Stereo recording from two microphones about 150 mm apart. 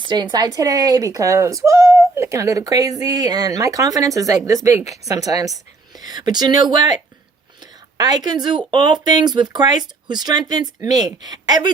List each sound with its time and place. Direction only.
0.0 s speech: 30° right (ahead or behind)